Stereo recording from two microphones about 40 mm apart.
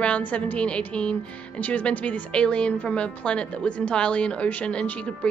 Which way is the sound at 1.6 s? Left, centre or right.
Left.